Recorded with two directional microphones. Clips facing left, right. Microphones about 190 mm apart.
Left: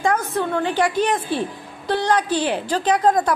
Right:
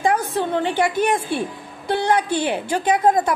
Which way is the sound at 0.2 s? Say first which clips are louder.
Even; 35° right (ahead or behind).